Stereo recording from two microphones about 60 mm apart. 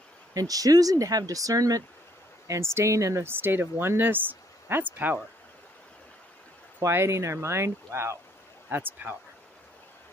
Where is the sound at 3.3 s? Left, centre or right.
Right.